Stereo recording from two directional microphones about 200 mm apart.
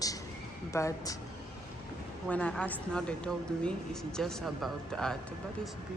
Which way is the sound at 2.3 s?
5° left (ahead or behind).